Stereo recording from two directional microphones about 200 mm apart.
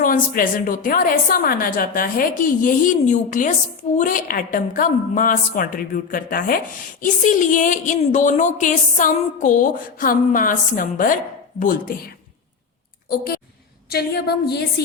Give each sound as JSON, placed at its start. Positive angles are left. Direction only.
{"t": 0.0, "sound": "a woman's voice", "side_deg": 45}
{"t": 13.1, "sound": "a sound", "side_deg": 50}
{"t": 13.9, "sound": "a woman's voice", "side_deg": 55}